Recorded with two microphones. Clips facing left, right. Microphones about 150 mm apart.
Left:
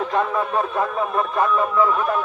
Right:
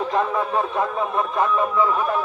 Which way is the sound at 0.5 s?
15° right (ahead or behind).